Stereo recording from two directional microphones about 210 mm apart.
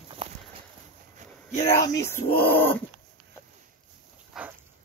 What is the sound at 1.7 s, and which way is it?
Speech, 15° left (ahead or behind).